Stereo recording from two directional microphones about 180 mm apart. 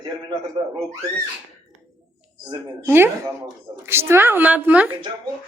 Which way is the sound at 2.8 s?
10° right (ahead or behind).